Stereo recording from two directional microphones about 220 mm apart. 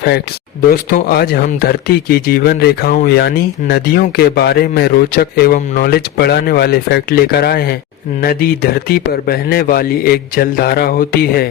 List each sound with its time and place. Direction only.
0.7 s speech: 40° left (ahead or behind)